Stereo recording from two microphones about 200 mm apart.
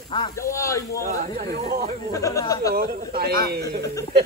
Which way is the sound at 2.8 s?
45° right (ahead or behind).